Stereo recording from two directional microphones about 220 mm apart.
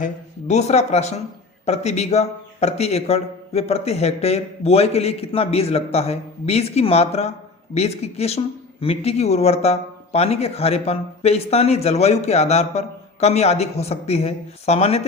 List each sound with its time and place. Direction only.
0.0 s a man's voice: 30° left (ahead or behind)